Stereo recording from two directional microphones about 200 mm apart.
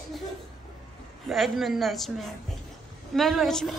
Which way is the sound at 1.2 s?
Centre (ahead or behind).